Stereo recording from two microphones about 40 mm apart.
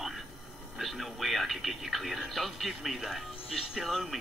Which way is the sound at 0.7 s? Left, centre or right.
Centre.